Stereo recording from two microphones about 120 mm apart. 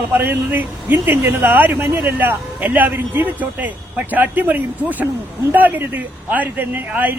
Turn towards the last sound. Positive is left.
turn(degrees=-15)  # may be behind; listen again after turning